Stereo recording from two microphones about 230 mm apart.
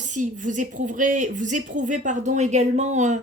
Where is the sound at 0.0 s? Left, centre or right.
Right.